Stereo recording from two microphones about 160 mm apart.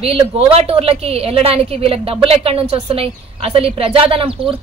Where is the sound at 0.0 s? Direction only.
35° right (ahead or behind).